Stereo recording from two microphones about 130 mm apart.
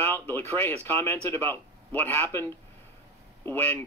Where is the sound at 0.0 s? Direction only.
15° left (ahead or behind).